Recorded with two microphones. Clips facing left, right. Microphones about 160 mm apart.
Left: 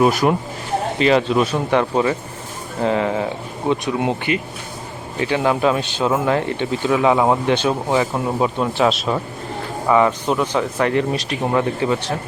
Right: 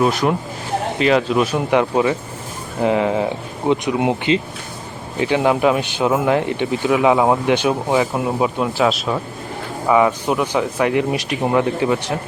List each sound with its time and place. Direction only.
0.0 s speech: 5° left (ahead or behind)
1.5 s speech: 10° right (ahead or behind)